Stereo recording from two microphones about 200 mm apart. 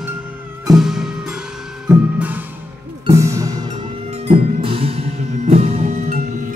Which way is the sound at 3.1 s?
15° right (ahead or behind).